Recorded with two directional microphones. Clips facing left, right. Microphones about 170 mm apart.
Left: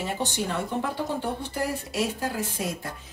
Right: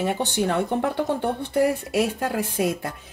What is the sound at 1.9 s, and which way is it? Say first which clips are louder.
Speech: right 5 dB; 60° right (ahead or behind).